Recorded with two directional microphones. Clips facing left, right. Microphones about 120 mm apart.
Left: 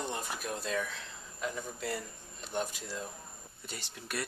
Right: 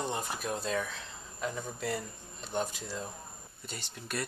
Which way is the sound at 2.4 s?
35° right (ahead or behind).